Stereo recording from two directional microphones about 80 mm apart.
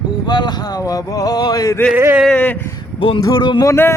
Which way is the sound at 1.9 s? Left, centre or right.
Right.